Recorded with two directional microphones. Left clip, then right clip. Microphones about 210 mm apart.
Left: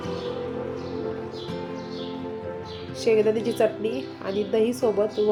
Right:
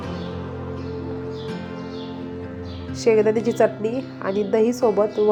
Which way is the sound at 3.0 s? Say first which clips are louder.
Right 4 dB; 15° right (ahead or behind).